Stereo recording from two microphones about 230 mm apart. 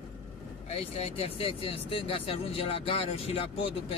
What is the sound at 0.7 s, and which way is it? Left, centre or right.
Speech, left.